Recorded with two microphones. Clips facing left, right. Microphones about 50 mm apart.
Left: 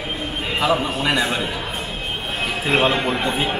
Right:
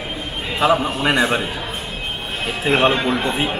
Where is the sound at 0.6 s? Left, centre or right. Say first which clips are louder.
Right 3 dB; right.